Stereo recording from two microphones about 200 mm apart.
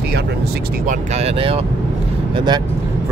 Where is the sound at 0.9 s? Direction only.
30° right (ahead or behind).